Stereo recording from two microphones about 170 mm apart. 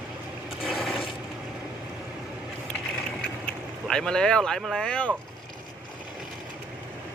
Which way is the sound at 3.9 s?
5° left (ahead or behind).